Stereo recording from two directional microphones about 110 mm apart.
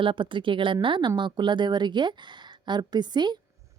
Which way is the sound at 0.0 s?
50° right (ahead or behind).